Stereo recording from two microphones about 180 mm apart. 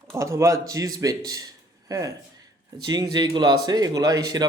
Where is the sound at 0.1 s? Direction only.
15° right (ahead or behind).